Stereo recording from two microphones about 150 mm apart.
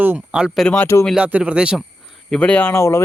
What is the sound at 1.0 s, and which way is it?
Speech, centre (ahead or behind).